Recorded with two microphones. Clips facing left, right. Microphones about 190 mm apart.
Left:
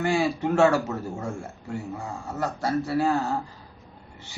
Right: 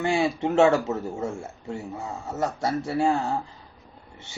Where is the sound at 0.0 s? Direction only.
25° right (ahead or behind).